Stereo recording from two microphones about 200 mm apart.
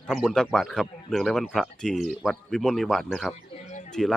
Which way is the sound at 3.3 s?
35° left (ahead or behind).